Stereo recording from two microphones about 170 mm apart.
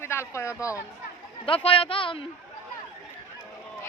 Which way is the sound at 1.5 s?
35° left (ahead or behind).